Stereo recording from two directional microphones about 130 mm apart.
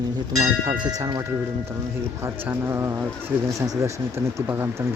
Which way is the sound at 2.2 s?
15° right (ahead or behind).